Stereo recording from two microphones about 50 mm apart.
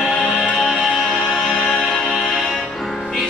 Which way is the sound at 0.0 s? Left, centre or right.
Centre.